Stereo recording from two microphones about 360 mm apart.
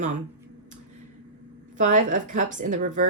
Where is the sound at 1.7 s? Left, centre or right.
Right.